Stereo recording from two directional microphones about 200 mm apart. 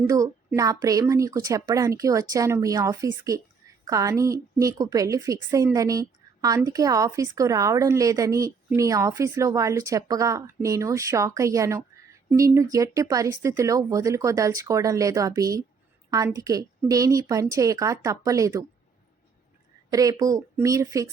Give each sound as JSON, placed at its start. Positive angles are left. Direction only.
{"t": 0.1, "sound": "a woman's voice", "side_deg": -15}
{"t": 19.9, "sound": "a woman's voice", "side_deg": -20}